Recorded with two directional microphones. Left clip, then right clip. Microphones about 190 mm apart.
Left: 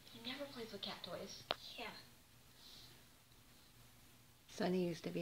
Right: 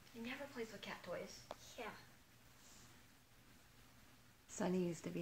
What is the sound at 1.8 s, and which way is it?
Speech, 20° right (ahead or behind).